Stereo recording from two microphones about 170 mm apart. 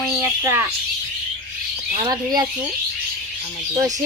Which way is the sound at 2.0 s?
25° right (ahead or behind).